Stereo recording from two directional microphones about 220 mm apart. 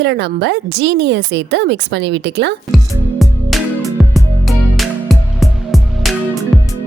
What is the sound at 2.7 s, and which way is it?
Music, centre (ahead or behind).